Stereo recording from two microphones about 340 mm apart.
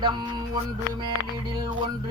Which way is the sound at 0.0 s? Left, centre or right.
Centre.